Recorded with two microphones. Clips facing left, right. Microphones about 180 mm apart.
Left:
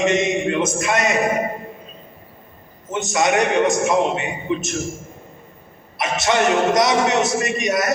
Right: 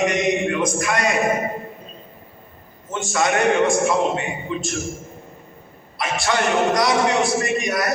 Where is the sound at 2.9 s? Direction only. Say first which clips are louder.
Left 2 dB; 20° left (ahead or behind).